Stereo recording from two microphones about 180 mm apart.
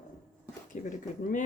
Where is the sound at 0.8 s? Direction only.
40° left (ahead or behind).